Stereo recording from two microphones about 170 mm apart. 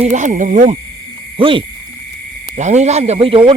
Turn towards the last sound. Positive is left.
turn(degrees=-30)  # may be behind; listen again after turning